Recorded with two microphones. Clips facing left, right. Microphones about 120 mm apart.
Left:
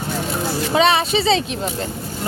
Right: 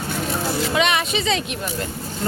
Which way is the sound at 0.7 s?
30° left (ahead or behind).